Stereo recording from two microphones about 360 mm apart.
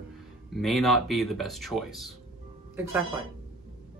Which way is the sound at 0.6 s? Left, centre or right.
Centre.